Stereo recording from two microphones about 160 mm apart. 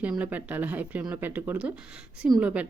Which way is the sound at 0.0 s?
10° right (ahead or behind).